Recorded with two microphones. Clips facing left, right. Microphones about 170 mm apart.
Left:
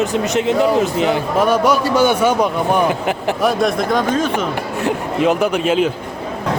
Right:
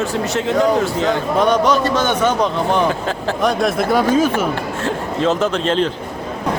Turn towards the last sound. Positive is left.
turn(degrees=10)  # may be behind; listen again after turning